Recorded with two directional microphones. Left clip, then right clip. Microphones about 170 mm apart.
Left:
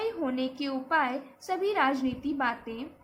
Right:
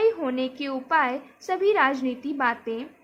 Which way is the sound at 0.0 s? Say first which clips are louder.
Right 8 dB; 45° right (ahead or behind).